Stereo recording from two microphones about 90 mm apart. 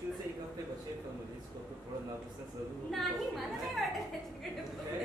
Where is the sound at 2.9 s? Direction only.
Centre (ahead or behind).